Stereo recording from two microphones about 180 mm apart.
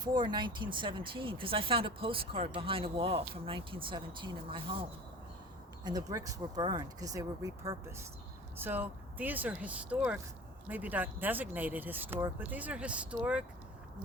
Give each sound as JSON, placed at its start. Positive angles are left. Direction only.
{"t": 0.0, "sound": "speech", "side_deg": -25}
{"t": 5.8, "sound": "speech", "side_deg": -20}